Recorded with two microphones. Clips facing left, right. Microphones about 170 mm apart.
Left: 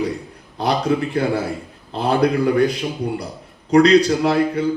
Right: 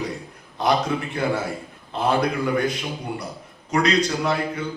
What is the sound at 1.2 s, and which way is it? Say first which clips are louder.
A man's voice: left 4 dB; 30° left (ahead or behind).